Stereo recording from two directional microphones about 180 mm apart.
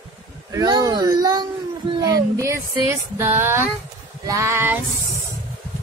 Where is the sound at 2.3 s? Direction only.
15° right (ahead or behind).